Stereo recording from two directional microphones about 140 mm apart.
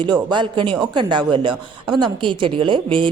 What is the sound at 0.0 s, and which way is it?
Speech, 30° right (ahead or behind).